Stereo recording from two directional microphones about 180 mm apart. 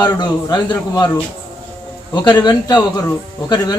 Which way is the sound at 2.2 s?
25° left (ahead or behind).